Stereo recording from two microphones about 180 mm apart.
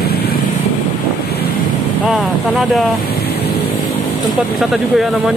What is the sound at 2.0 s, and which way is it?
Speech, centre (ahead or behind).